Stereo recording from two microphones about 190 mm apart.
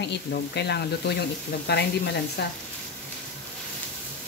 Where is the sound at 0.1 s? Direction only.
60° left (ahead or behind).